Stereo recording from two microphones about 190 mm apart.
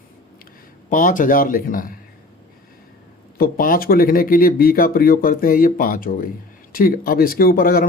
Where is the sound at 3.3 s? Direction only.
50° left (ahead or behind).